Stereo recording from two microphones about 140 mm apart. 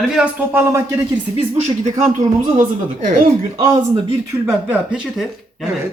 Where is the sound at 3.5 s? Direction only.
25° right (ahead or behind).